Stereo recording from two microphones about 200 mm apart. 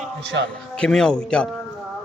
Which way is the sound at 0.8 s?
5° left (ahead or behind).